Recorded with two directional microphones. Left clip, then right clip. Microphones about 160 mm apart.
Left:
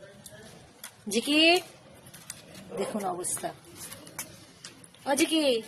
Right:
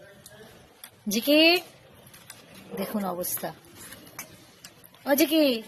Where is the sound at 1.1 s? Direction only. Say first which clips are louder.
Right 2 dB; 60° right (ahead or behind).